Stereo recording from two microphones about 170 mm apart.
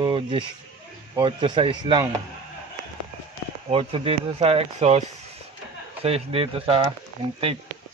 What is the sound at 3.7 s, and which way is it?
Speech, 35° right (ahead or behind).